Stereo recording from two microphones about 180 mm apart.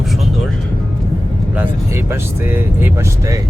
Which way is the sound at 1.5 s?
15° right (ahead or behind).